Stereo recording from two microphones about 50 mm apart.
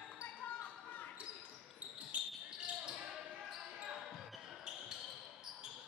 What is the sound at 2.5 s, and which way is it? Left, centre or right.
Basketball bounce, centre.